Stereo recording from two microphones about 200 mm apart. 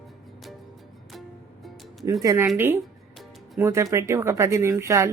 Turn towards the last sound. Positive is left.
turn(degrees=-15)  # may be behind; listen again after turning